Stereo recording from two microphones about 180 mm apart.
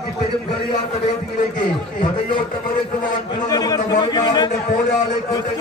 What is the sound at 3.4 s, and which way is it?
A man's voice, 20° left (ahead or behind).